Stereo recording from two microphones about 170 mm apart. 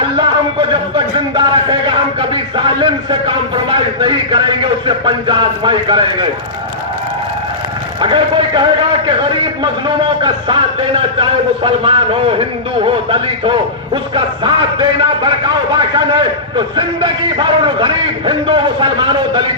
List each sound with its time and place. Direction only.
0.7 s speech: 30° right (ahead or behind)
8.0 s speech: 30° right (ahead or behind)
9.8 s a man's voice: 30° right (ahead or behind)
16.6 s speech: 30° right (ahead or behind)